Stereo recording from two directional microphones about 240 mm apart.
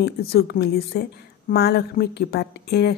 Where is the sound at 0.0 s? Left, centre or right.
Left.